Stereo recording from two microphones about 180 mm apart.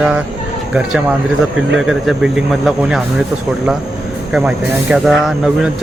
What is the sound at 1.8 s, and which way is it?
Speech, 5° right (ahead or behind).